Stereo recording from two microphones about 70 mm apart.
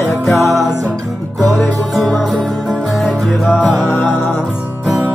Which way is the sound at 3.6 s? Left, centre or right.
Centre.